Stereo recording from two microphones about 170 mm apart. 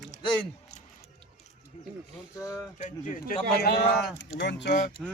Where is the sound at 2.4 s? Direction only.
20° left (ahead or behind).